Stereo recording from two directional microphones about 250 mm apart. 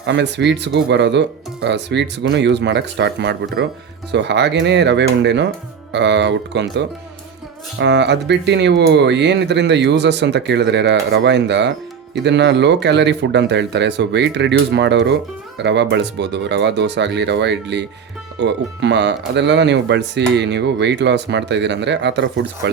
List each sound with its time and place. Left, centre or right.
0.0 s speech: right